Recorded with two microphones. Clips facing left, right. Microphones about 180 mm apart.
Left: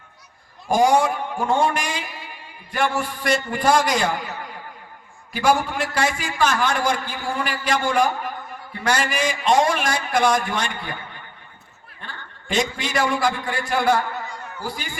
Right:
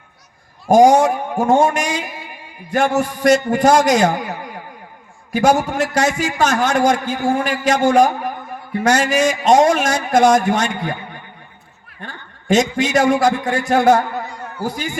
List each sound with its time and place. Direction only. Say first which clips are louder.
0.7 s a man's voice: right 7 dB; 45° right (ahead or behind)